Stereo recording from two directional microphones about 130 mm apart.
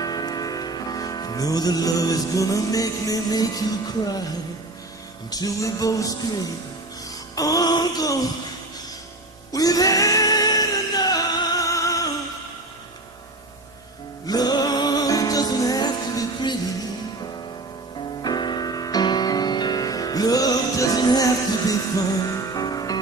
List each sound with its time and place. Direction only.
0.0 s music: 30° left (ahead or behind)
5.3 s music: 30° left (ahead or behind)
9.5 s music: 30° left (ahead or behind)
14.2 s music: 30° left (ahead or behind)
18.2 s music: 35° left (ahead or behind)